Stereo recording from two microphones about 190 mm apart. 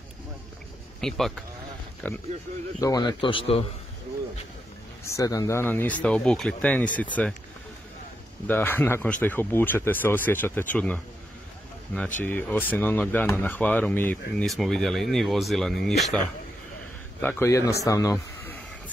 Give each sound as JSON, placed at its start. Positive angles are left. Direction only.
{"t": 1.0, "sound": "speech", "side_deg": 0}
{"t": 2.8, "sound": "speech", "side_deg": 20}
{"t": 5.0, "sound": "speech", "side_deg": 15}
{"t": 8.5, "sound": "speech", "side_deg": 10}
{"t": 17.2, "sound": "speech", "side_deg": 10}